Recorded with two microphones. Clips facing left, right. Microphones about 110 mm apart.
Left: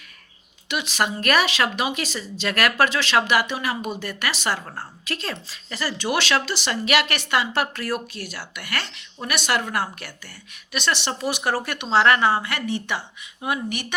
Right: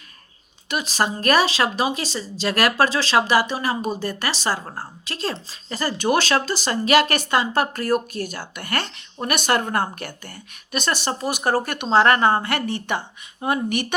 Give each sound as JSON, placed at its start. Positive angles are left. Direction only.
{"t": 0.7, "sound": "a woman's voice", "side_deg": -40}
{"t": 13.4, "sound": "speech", "side_deg": -40}